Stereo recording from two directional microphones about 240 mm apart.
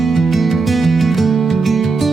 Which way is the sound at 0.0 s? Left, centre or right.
Centre.